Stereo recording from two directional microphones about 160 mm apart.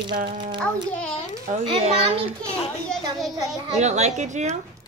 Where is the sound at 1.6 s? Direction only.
40° right (ahead or behind).